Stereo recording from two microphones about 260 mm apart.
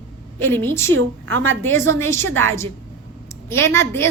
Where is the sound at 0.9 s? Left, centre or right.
Right.